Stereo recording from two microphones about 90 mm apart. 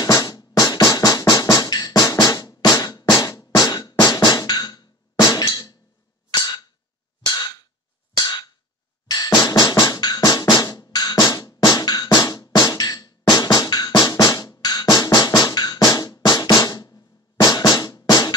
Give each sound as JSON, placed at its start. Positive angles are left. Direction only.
{"t": 0.0, "sound": "music", "side_deg": 45}
{"t": 1.2, "sound": "drum", "side_deg": 45}
{"t": 6.3, "sound": "a sound", "side_deg": 50}
{"t": 9.0, "sound": "drum", "side_deg": 45}